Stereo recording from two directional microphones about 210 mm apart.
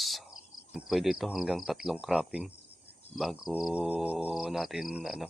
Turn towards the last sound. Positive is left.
turn(degrees=-5)  # may be behind; listen again after turning